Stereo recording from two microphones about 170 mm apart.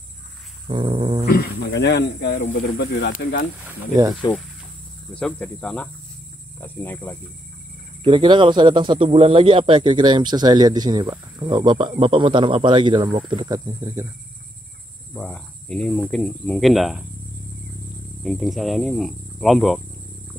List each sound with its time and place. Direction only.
0.7 s a man's voice: 30° right (ahead or behind)
1.2 s speech: 65° left (ahead or behind)
3.6 s speech: 15° right (ahead or behind)
5.1 s speech: 5° left (ahead or behind)
8.0 s a man's voice: 30° right (ahead or behind)
15.1 s speech: 5° left (ahead or behind)
18.2 s speech: centre (ahead or behind)